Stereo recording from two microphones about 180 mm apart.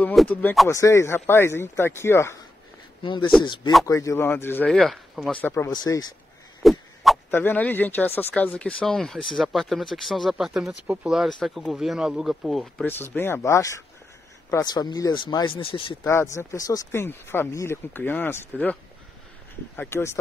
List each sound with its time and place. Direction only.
0.0 s speech: 5° left (ahead or behind)
3.0 s speech: 25° left (ahead or behind); by 5.7 s 10° left (ahead or behind)
5.7 s speech: 25° left (ahead or behind)
6.6 s a sound: centre (ahead or behind)
7.2 s speech: 10° left (ahead or behind)
12.8 s speech: 10° left (ahead or behind); by 16.0 s 30° left (ahead or behind)
16.0 s speech: 15° left (ahead or behind)
19.8 s speech: 15° left (ahead or behind)